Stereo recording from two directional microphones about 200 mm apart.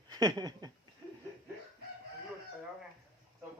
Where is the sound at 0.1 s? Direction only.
20° right (ahead or behind).